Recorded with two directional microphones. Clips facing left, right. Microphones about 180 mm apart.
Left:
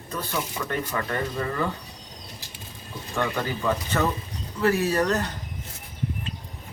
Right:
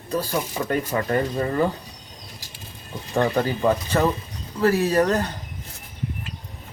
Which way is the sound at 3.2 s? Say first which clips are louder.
Right 6 dB; 35° right (ahead or behind).